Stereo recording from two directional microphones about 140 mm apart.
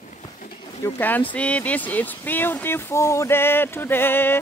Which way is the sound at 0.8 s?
15° left (ahead or behind).